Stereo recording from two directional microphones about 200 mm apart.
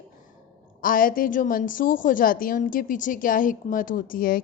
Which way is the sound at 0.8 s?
45° left (ahead or behind).